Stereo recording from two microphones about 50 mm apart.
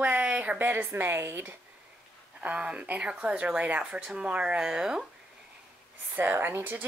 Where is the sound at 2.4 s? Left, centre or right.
Right.